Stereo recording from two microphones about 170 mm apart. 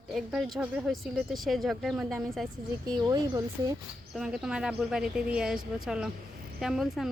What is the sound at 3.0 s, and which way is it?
Speech, 20° right (ahead or behind).